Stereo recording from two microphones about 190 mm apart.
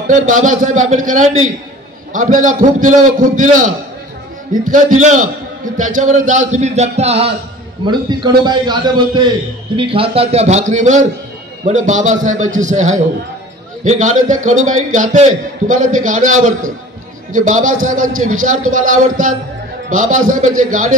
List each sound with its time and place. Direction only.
0.5 s a man's voice: 40° right (ahead or behind)